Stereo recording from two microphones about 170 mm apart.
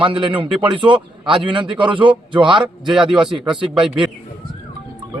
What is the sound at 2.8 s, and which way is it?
Speech, centre (ahead or behind).